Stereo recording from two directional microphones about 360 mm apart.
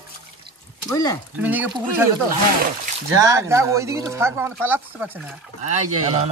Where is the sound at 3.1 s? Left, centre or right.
Centre.